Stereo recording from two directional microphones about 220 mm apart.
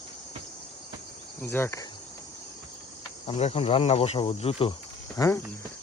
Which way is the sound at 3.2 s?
30° left (ahead or behind).